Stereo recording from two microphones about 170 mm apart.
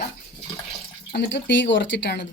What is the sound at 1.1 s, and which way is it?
Speech, 90° left.